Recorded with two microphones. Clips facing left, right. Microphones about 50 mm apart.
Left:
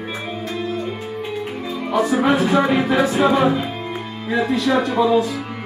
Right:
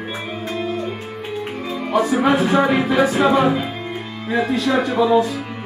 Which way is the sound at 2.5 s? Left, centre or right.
Centre.